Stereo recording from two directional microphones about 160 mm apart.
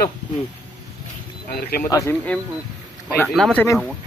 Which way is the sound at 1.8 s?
20° left (ahead or behind).